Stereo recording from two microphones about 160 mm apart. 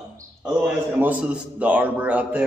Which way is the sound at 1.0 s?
10° right (ahead or behind).